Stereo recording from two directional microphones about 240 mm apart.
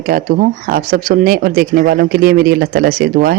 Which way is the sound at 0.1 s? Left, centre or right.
Right.